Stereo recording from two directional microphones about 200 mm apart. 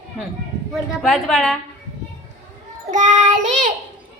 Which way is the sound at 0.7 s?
Centre (ahead or behind).